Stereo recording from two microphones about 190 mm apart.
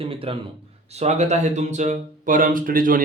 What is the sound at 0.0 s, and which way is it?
A man's voice, 30° right (ahead or behind).